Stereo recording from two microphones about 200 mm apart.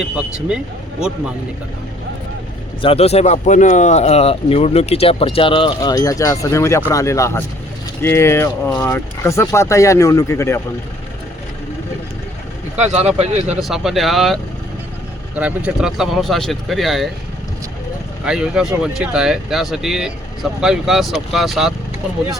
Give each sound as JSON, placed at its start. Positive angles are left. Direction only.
{"t": 0.0, "sound": "speech", "side_deg": -5}
{"t": 2.8, "sound": "speech", "side_deg": 30}
{"t": 12.8, "sound": "speech", "side_deg": -35}
{"t": 13.5, "sound": "speech", "side_deg": 0}
{"t": 15.4, "sound": "speech", "side_deg": -5}
{"t": 18.3, "sound": "speech", "side_deg": -5}